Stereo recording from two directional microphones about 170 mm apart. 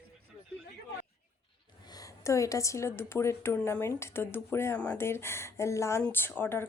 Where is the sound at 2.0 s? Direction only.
20° left (ahead or behind).